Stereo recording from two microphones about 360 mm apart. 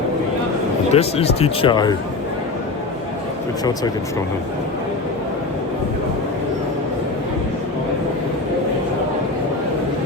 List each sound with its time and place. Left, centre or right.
0.9 s speech: centre